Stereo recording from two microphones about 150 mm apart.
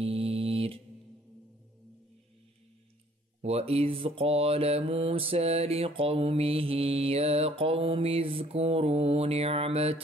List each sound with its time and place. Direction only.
0.0 s music: 40° right (ahead or behind)
3.4 s mantra: 40° right (ahead or behind)